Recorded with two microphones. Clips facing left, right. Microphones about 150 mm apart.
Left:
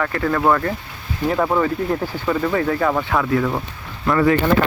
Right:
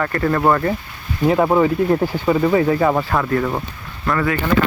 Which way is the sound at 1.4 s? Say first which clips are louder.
Right 3 dB; 15° right (ahead or behind).